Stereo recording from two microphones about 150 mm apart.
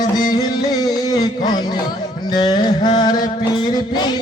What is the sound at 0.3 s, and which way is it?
Music, 25° left (ahead or behind).